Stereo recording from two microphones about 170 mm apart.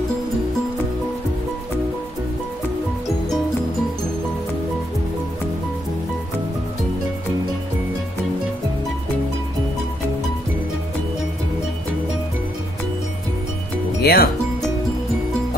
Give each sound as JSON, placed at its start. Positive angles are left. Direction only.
{"t": 14.0, "sound": "speech", "side_deg": 65}